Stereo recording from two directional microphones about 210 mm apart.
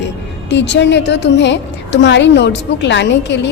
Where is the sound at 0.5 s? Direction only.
55° left (ahead or behind).